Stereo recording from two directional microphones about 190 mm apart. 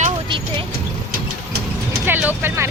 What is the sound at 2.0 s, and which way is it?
Vehicle, 10° right (ahead or behind).